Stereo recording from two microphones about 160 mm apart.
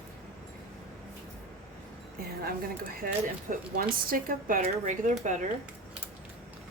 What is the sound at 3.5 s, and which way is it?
Speech, 65° right (ahead or behind).